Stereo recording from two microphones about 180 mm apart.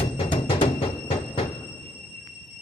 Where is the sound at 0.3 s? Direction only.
30° left (ahead or behind).